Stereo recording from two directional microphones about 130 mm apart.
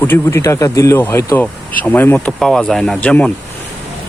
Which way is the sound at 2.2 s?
5° left (ahead or behind).